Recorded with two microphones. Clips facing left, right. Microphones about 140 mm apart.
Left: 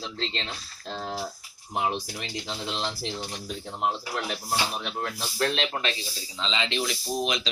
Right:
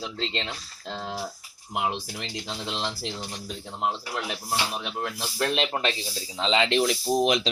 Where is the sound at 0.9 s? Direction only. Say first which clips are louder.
Even; 5° right (ahead or behind).